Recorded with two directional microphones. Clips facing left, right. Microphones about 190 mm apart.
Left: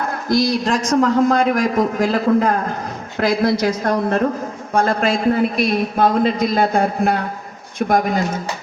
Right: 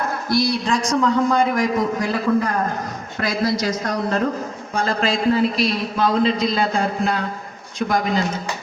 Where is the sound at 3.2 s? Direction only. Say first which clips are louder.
Left 5 dB; 60° left (ahead or behind).